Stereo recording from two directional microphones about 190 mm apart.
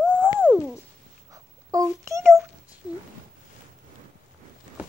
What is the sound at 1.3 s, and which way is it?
Babbling, 20° right (ahead or behind).